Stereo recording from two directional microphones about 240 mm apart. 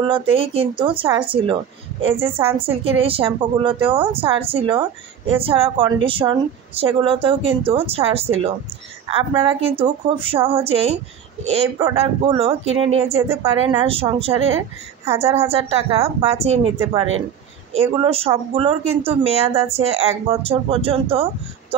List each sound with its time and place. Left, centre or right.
0.0 s a woman's voice: right
15.5 s a woman's voice: right
17.7 s a woman's voice: right